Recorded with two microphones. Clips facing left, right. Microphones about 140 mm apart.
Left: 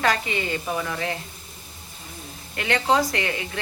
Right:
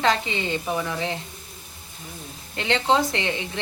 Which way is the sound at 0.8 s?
10° right (ahead or behind).